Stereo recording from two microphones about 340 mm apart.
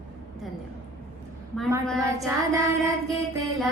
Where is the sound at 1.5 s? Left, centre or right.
Centre.